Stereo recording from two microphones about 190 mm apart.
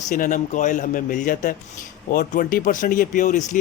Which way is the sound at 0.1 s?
45° left (ahead or behind).